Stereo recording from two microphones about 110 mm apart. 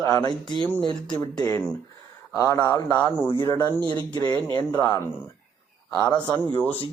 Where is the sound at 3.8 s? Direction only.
45° right (ahead or behind).